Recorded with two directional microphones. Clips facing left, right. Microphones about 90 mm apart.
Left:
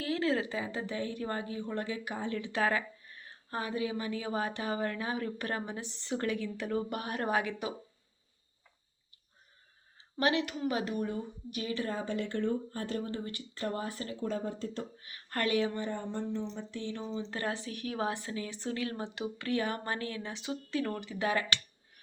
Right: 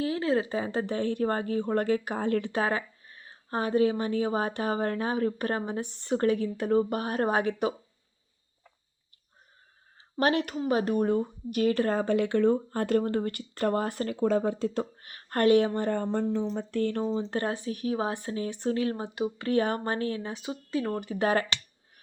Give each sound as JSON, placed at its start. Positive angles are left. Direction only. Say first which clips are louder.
{"t": 0.0, "sound": "a sound", "louder": "right 4 dB", "side_deg": -25}
{"t": 0.7, "sound": "speech", "louder": "right 7 dB", "side_deg": -50}
{"t": 2.6, "sound": "a sound", "louder": "right 2 dB", "side_deg": -30}
{"t": 3.6, "sound": "speech", "louder": "right 10 dB", "side_deg": -40}
{"t": 5.8, "sound": "speech", "louder": "right 7 dB", "side_deg": -50}
{"t": 6.1, "sound": "speech", "louder": "right 8 dB", "side_deg": -35}
{"t": 10.2, "sound": "speech", "louder": "right 4 dB", "side_deg": -45}
{"t": 15.0, "sound": "speech", "louder": "right 10 dB", "side_deg": -40}
{"t": 16.6, "sound": "speech", "louder": "right 10 dB", "side_deg": -55}
{"t": 21.0, "sound": "speech", "louder": "right 6 dB", "side_deg": -45}